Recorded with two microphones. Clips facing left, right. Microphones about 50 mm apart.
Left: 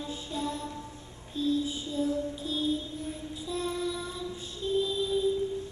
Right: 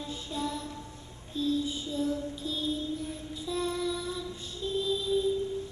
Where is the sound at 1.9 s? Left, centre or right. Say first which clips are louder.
Left 2 dB; centre.